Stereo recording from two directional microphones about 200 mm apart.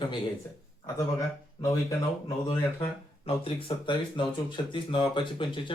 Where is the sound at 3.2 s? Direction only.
25° left (ahead or behind).